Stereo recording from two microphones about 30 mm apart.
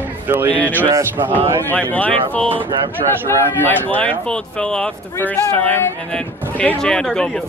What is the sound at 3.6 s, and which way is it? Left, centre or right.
Speech, left.